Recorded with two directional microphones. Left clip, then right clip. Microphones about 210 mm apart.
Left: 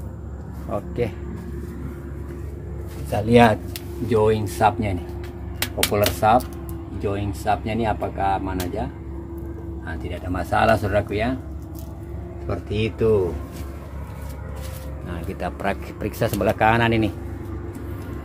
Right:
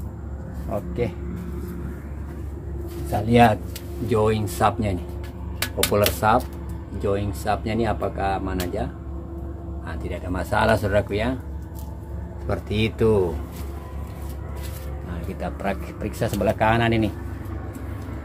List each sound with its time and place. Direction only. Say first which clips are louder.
0.7 s speech: left 1 dB; 15° left (ahead or behind)
3.1 s speech: left 2 dB; 10° left (ahead or behind)
4.1 s speech: left 2 dB; 5° right (ahead or behind)
9.8 s speech: even; centre (ahead or behind)
12.4 s speech: right 1 dB; 15° right (ahead or behind)
15.2 s speech: left 2 dB; 15° left (ahead or behind)